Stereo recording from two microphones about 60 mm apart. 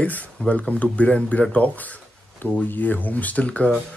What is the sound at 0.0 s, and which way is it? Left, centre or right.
Speech, left.